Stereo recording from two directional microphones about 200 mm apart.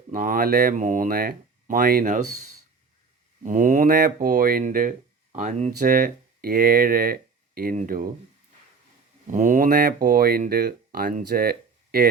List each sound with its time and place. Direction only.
0.1 s speech: 40° right (ahead or behind)
3.4 s speech: 40° right (ahead or behind)
9.2 s speech: 40° right (ahead or behind)